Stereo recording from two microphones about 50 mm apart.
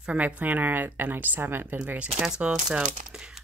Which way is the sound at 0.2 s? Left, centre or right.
Right.